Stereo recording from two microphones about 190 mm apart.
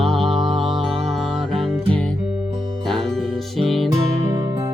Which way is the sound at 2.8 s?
Centre (ahead or behind).